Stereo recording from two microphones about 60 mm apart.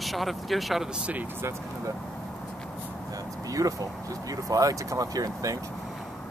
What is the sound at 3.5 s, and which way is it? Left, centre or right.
Speech, right.